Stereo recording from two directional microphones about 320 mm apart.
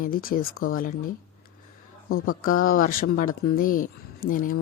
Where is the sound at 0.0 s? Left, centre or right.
Left.